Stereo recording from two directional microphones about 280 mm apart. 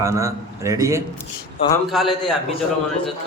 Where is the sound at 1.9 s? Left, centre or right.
Centre.